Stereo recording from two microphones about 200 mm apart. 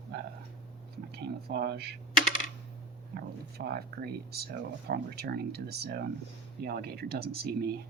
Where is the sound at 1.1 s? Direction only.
50° right (ahead or behind).